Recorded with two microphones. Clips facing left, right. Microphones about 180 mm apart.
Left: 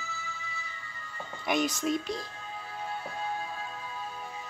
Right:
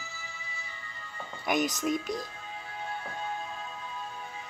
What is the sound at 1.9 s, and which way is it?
Speech, 45° right (ahead or behind).